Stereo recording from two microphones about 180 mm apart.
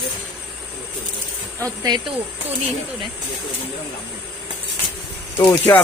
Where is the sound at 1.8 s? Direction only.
25° right (ahead or behind).